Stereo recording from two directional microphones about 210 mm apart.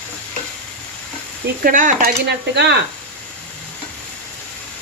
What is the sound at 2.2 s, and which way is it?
Speech, 55° right (ahead or behind).